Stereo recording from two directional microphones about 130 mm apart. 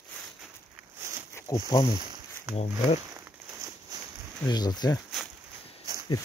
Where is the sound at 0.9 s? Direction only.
20° right (ahead or behind).